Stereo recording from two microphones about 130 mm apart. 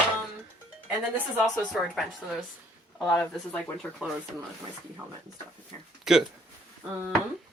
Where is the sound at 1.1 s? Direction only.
15° right (ahead or behind).